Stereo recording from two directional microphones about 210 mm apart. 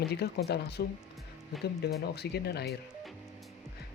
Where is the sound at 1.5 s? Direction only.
Centre (ahead or behind).